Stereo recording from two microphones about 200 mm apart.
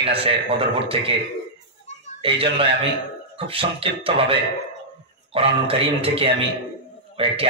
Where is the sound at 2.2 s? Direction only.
25° right (ahead or behind).